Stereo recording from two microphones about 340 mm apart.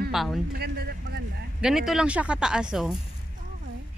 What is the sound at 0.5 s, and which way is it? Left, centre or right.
Speech, right.